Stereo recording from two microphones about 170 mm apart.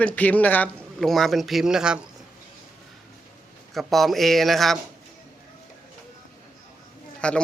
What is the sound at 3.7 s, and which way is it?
Speech, centre (ahead or behind).